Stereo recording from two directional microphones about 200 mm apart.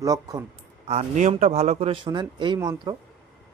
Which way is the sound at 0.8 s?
35° right (ahead or behind).